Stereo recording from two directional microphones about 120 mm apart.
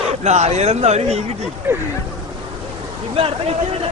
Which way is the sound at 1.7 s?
20° right (ahead or behind).